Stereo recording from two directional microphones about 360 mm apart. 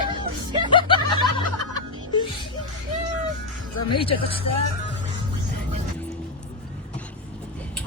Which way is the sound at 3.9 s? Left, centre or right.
Centre.